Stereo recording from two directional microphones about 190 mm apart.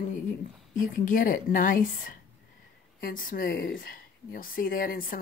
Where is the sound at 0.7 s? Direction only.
45° left (ahead or behind).